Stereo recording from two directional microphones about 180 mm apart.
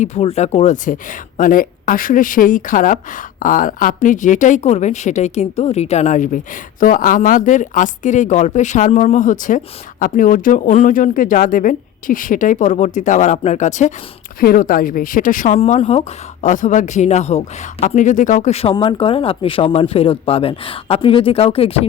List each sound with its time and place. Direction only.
0.0 s speech: 35° left (ahead or behind)
14.4 s speech: 50° left (ahead or behind)
15.5 s speech: 35° left (ahead or behind)